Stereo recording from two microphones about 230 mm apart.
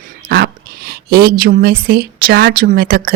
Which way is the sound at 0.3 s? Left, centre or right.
Right.